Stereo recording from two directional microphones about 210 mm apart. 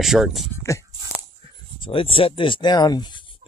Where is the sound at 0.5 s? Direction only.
15° left (ahead or behind).